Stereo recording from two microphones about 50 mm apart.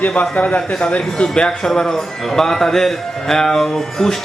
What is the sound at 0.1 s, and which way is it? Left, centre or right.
Speech, left.